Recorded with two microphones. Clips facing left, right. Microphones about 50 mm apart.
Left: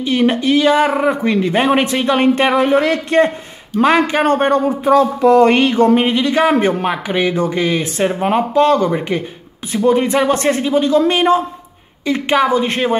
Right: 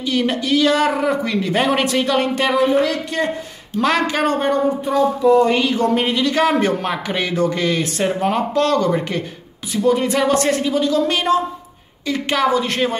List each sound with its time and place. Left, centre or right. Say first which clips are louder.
0.0 s speech: left 5 dB; left
3.8 s speech: left 5 dB; left
4.3 s speech: left 5 dB; left
4.8 s speech: left 5 dB; left
5.7 s speech: left 5 dB; left